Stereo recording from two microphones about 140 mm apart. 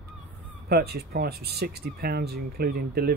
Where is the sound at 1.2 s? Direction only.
90° right.